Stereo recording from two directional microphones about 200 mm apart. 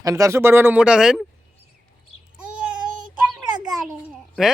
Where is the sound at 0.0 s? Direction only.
15° right (ahead or behind).